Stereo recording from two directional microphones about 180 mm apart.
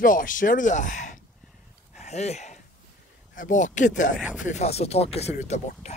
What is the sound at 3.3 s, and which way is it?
Speech, 45° left (ahead or behind).